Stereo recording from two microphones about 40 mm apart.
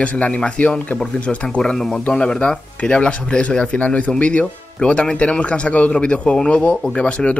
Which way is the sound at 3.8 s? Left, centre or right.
Left.